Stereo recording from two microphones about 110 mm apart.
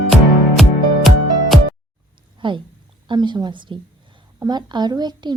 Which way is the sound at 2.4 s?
50° right (ahead or behind).